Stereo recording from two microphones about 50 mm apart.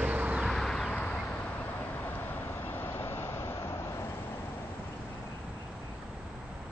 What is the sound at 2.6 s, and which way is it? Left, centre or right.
Vehicle, left.